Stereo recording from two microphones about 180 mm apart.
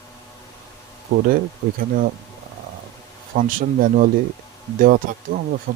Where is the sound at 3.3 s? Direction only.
50° right (ahead or behind).